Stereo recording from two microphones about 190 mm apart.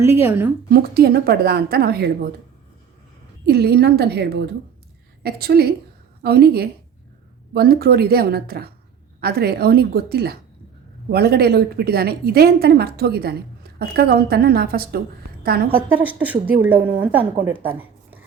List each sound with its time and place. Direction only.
0.0 s a woman's voice: 15° right (ahead or behind)
0.7 s a woman's voice: 55° right (ahead or behind)
3.4 s a woman's voice: 55° right (ahead or behind)
15.7 s a woman's voice: 10° right (ahead or behind)
17.7 s a sound: 10° right (ahead or behind)